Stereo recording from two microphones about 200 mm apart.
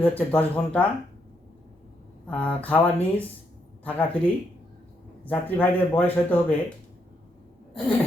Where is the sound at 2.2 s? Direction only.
5° left (ahead or behind).